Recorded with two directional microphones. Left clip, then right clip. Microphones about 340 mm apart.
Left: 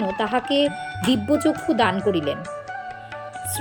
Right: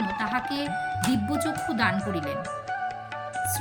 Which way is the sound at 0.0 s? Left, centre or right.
Centre.